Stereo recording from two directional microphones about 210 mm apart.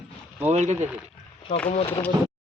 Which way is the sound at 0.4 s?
35° right (ahead or behind).